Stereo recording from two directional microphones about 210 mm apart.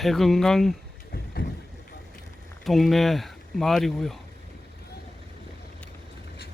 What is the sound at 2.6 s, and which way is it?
Speech, centre (ahead or behind).